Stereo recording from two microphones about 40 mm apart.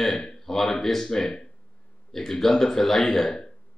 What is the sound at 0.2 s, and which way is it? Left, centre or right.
Speech, centre.